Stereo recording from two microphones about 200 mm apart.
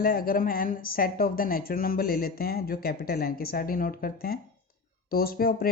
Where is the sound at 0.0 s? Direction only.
50° left (ahead or behind).